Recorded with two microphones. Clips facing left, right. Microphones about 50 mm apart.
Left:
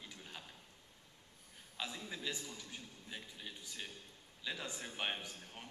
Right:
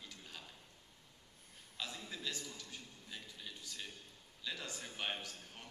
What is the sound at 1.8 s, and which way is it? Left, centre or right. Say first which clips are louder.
A man's voice: left 2 dB; centre.